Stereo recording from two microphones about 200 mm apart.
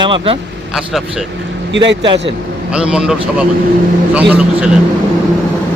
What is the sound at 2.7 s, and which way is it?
Speech, 5° right (ahead or behind).